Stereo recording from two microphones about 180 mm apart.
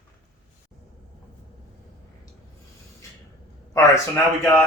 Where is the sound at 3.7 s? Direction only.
10° left (ahead or behind).